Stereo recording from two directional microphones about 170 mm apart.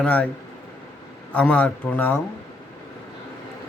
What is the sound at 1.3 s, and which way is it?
Speech, 10° left (ahead or behind).